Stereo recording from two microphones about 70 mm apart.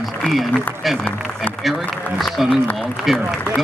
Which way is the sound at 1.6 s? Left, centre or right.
Centre.